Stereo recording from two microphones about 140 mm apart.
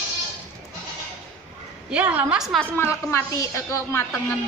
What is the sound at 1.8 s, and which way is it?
Speech, 10° right (ahead or behind).